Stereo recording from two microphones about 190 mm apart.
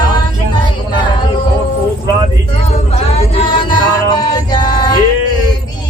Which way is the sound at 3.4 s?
25° left (ahead or behind).